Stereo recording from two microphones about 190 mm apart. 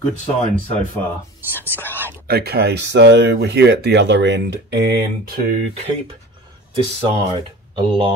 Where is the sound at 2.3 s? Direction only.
55° right (ahead or behind).